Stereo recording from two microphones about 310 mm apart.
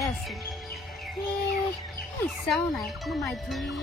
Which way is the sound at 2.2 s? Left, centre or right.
Centre.